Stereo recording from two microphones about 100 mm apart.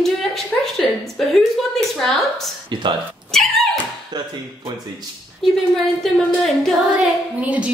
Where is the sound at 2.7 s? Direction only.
50° right (ahead or behind).